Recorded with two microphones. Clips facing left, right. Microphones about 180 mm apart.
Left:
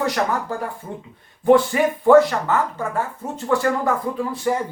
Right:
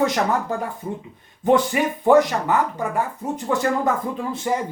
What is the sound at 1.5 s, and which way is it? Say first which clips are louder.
Speech: left 3 dB; 15° right (ahead or behind).